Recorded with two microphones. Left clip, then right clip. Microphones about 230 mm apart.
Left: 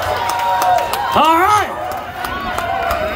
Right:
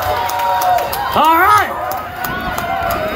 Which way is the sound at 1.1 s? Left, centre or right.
Centre.